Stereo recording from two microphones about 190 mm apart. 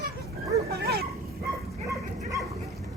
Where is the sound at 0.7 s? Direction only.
55° right (ahead or behind).